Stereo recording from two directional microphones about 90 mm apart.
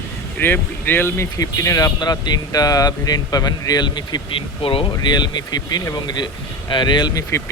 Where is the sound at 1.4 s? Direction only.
40° left (ahead or behind).